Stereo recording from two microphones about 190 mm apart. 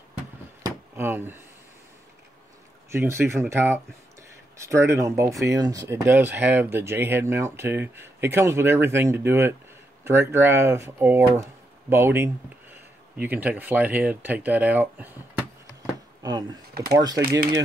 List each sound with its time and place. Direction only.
0.7 s a sound: 10° right (ahead or behind)
2.9 s speech: 10° right (ahead or behind)
16.2 s speech: 20° right (ahead or behind)
16.7 s speech: 55° right (ahead or behind)
17.0 s speech: 20° right (ahead or behind)